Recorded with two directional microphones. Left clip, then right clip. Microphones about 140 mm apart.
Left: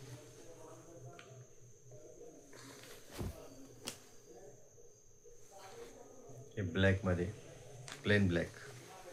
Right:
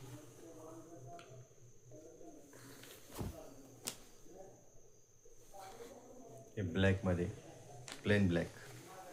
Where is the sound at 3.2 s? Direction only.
10° right (ahead or behind).